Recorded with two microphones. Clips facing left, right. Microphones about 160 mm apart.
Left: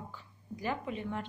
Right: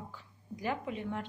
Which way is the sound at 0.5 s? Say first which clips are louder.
Even; 10° right (ahead or behind).